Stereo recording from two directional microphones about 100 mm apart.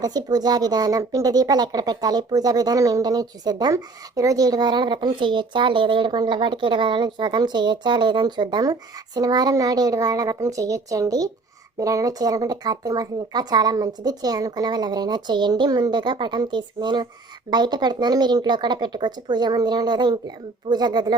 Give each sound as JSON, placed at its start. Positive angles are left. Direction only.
{"t": 0.0, "sound": "speech", "side_deg": -40}